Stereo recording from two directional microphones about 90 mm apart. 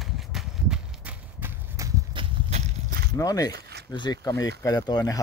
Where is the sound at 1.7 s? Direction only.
35° right (ahead or behind).